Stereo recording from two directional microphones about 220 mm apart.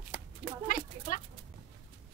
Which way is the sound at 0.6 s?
40° left (ahead or behind).